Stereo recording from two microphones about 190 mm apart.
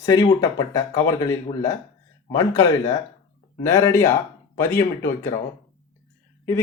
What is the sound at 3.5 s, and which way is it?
Speech, 15° left (ahead or behind).